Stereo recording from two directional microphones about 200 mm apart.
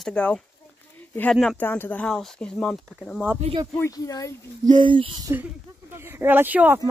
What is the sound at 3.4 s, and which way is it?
Speech, 25° right (ahead or behind).